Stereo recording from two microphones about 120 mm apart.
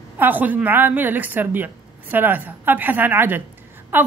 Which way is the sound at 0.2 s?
15° right (ahead or behind).